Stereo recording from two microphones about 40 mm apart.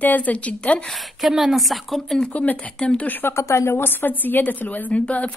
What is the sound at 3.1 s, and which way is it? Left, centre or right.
A woman's voice, left.